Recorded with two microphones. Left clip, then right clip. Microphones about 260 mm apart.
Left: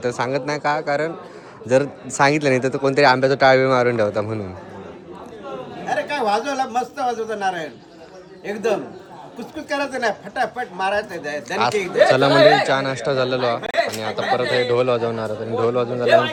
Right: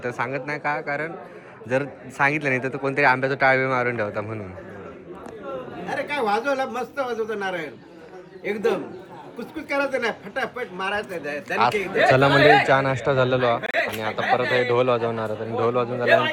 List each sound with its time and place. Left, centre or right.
0.0 s speech: centre
5.8 s a man's voice: centre
10.8 s a man's voice: left
12.1 s speech: centre